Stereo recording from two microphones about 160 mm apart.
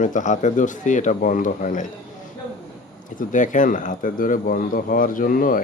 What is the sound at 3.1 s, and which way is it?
Speech, 55° left (ahead or behind).